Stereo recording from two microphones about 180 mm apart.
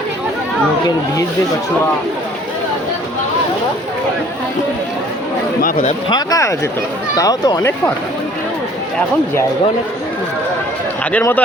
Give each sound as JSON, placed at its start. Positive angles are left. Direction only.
{"t": 6.1, "sound": "speech", "side_deg": 20}
{"t": 11.1, "sound": "speech", "side_deg": 10}